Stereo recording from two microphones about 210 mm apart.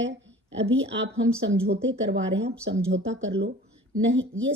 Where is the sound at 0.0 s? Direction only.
60° right (ahead or behind).